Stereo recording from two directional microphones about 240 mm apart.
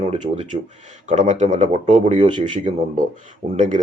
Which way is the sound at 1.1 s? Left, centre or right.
Right.